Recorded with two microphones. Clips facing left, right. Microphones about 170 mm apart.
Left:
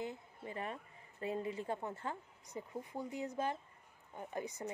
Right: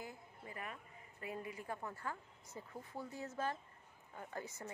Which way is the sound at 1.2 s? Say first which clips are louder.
Left 7 dB; 25° left (ahead or behind).